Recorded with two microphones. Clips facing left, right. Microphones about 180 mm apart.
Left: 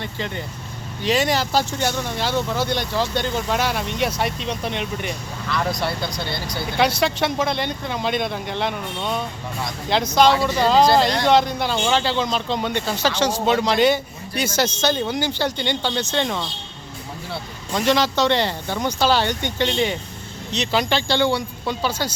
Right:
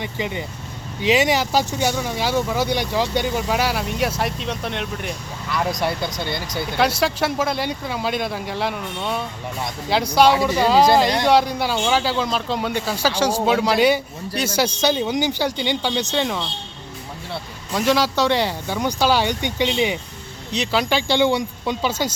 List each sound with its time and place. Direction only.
0.0 s speech: 10° right (ahead or behind)
5.5 s speech: 15° right (ahead or behind)
7.0 s speech: 5° right (ahead or behind)
17.7 s speech: 5° right (ahead or behind)